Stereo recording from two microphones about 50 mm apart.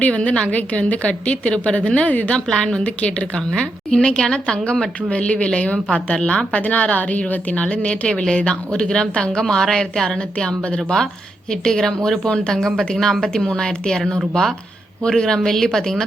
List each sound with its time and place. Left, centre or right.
0.0 s a woman's voice: left; by 10.2 s centre
10.3 s a woman's voice: left
15.0 s a woman's voice: centre